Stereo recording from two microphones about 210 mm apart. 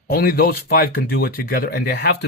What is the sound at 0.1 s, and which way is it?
Speech, 45° left (ahead or behind).